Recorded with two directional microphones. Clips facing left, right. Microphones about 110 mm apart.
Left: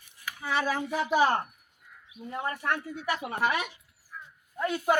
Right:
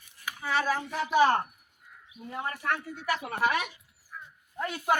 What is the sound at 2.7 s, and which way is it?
Speech, 15° left (ahead or behind).